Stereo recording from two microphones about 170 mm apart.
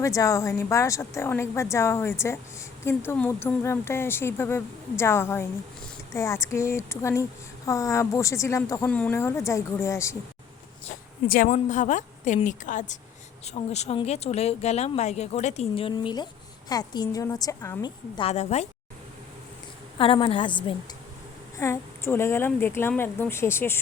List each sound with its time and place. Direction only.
0.0 s speech: 20° left (ahead or behind)
11.4 s a woman's voice: 45° left (ahead or behind); by 17.9 s 20° left (ahead or behind)
18.2 s speech: 40° left (ahead or behind)
20.0 s a woman's voice: 30° left (ahead or behind)
21.6 s speech: 15° left (ahead or behind)